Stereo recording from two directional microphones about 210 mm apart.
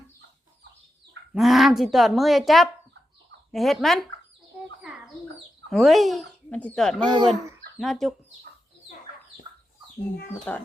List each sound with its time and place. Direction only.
1.3 s speech: centre (ahead or behind)
5.7 s speech: centre (ahead or behind)
7.0 s speech: 20° right (ahead or behind)
7.8 s speech: centre (ahead or behind)
10.5 s speech: 5° left (ahead or behind)